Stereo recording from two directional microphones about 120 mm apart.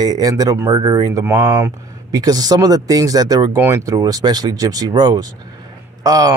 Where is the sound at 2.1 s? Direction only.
30° right (ahead or behind).